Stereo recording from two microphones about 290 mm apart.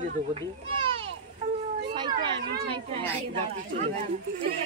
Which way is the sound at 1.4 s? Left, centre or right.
Right.